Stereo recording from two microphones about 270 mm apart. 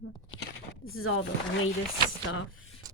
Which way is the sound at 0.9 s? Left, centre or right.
Left.